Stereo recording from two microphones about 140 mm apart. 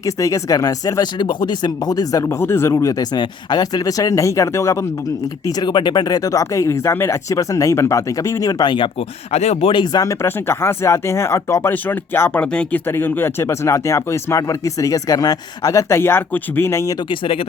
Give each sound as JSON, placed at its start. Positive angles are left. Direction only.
{"t": 0.0, "sound": "speech", "side_deg": 25}
{"t": 17.1, "sound": "speech", "side_deg": 40}